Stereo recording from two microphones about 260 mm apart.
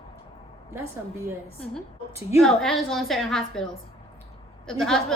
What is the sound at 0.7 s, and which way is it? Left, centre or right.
Speech, centre.